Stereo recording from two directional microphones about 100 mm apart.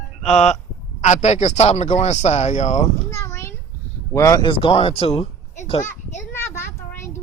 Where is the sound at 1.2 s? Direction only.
90° left.